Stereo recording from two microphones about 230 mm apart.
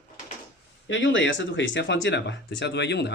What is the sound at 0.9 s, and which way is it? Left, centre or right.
Speech, left.